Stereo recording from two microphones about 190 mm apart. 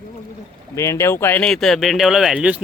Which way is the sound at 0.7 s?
15° left (ahead or behind).